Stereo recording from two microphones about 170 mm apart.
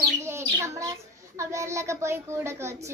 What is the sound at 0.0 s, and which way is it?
A child's voice, 15° right (ahead or behind).